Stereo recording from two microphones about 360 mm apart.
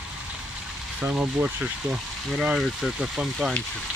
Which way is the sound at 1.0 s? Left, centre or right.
Centre.